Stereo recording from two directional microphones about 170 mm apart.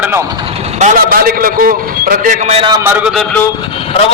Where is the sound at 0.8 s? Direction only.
55° right (ahead or behind).